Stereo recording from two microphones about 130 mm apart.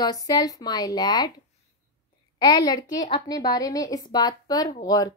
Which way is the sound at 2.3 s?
35° left (ahead or behind).